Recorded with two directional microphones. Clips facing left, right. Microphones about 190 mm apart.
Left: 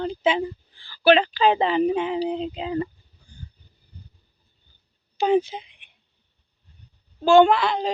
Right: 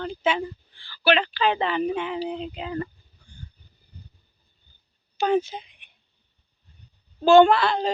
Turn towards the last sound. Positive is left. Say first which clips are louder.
# even
turn(degrees=15)  # may be behind; listen again after turning